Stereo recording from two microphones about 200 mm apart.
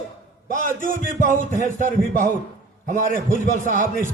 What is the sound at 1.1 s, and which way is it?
A man's voice, 40° right (ahead or behind).